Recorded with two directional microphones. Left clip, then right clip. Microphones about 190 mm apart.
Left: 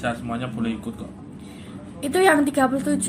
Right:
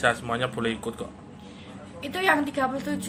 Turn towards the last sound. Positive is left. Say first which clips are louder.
# left 6 dB
turn(degrees=40)  # may be behind; listen again after turning